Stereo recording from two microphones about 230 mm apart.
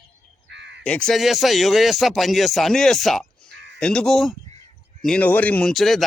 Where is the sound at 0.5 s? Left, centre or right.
Right.